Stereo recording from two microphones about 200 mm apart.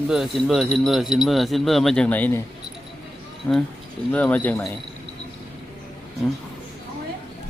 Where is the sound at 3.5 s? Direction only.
10° left (ahead or behind).